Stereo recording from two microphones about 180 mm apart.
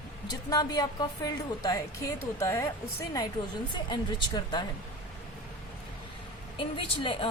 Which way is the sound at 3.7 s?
25° left (ahead or behind).